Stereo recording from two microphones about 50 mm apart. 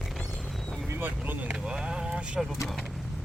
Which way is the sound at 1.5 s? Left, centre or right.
Centre.